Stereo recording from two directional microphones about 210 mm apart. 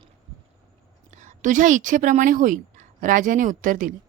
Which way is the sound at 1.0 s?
35° right (ahead or behind).